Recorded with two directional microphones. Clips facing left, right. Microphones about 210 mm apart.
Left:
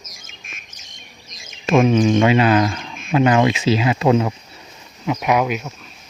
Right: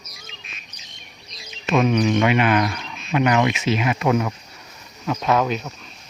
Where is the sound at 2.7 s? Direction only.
50° left (ahead or behind).